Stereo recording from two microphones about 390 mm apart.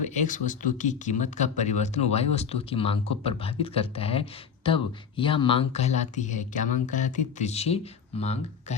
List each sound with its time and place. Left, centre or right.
0.0 s speech: centre